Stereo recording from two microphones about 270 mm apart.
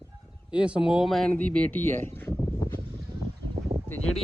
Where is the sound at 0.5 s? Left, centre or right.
Centre.